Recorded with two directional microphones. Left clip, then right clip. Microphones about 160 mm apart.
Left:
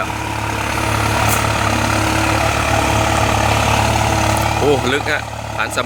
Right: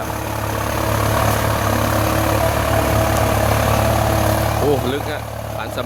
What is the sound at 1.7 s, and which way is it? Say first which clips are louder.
Vehicle: left 2 dB; 30° right (ahead or behind).